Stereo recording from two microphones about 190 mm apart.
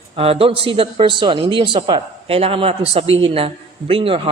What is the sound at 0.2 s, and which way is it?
A man's voice, 30° right (ahead or behind).